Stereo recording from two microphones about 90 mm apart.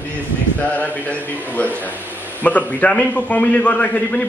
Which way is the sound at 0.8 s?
20° left (ahead or behind).